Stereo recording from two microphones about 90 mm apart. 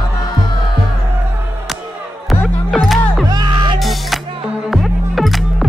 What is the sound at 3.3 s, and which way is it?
Music, 55° right (ahead or behind).